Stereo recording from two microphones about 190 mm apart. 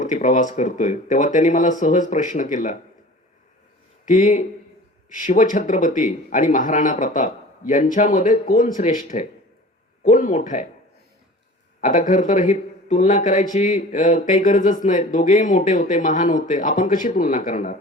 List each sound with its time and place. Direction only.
0.0 s speech: 40° left (ahead or behind)
4.0 s speech: 40° left (ahead or behind)
11.8 s speech: 45° left (ahead or behind)